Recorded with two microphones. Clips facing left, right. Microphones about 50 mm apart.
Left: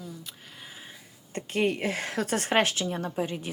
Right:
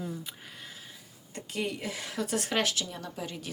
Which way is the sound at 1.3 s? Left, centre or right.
Left.